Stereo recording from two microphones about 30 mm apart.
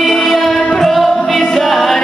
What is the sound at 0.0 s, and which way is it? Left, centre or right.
Music, centre.